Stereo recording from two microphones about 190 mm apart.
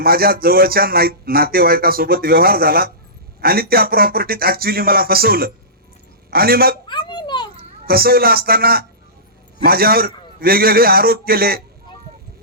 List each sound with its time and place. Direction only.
0.0 s a man's voice: 50° right (ahead or behind)
6.8 s a sound: 25° left (ahead or behind)
7.9 s a man's voice: 50° right (ahead or behind)